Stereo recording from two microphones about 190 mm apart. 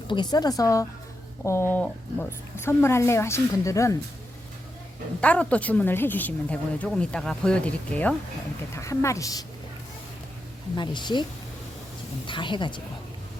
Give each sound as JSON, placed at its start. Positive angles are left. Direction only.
{"t": 0.1, "sound": "a woman's voice", "side_deg": 20}
{"t": 5.2, "sound": "speech", "side_deg": 5}
{"t": 10.8, "sound": "a woman's voice", "side_deg": 25}